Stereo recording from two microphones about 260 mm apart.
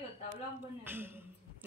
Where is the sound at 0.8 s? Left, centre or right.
Centre.